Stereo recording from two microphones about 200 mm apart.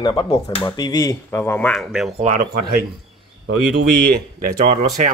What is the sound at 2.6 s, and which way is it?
Speech, 50° right (ahead or behind).